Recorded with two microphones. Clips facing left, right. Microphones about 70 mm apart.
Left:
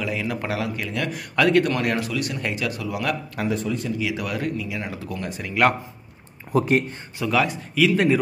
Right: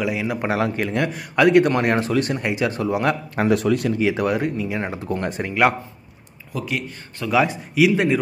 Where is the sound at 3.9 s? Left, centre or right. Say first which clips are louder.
Right 6 dB; right.